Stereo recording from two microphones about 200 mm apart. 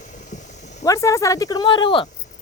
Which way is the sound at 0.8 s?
15° left (ahead or behind).